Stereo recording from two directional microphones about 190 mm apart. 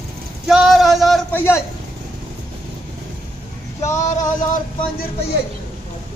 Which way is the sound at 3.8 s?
40° left (ahead or behind).